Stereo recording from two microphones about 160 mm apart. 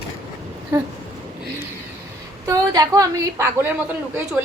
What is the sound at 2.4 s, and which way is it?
A woman's voice, 20° right (ahead or behind).